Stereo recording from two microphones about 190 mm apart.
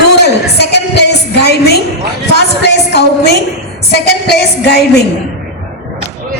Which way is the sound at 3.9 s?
60° left (ahead or behind).